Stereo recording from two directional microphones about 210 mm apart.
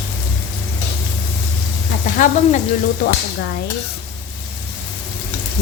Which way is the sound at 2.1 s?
35° left (ahead or behind).